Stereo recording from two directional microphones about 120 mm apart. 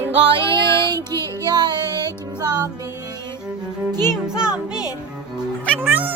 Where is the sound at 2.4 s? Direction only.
35° right (ahead or behind).